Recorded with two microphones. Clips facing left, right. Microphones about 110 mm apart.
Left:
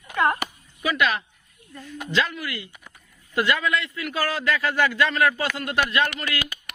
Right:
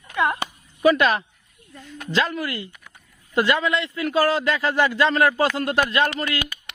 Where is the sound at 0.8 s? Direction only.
40° right (ahead or behind).